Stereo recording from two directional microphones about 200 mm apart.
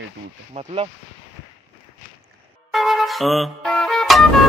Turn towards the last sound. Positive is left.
turn(degrees=0)  # may be behind; listen again after turning